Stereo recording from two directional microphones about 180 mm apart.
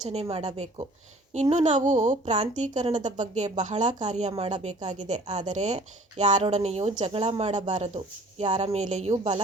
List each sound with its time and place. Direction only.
0.0 s speech: 35° right (ahead or behind)